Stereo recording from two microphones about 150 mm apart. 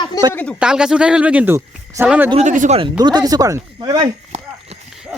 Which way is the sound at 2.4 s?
55° right (ahead or behind).